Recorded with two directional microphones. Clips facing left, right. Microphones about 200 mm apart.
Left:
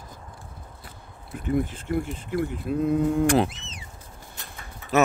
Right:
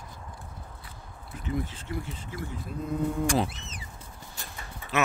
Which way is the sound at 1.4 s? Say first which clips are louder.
Left 7 dB; 55° left (ahead or behind).